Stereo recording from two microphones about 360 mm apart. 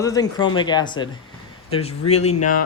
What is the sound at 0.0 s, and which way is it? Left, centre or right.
A man's voice, centre.